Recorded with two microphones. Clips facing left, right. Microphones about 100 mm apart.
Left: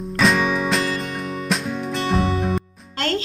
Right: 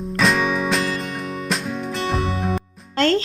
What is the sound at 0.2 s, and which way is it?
Music, centre (ahead or behind).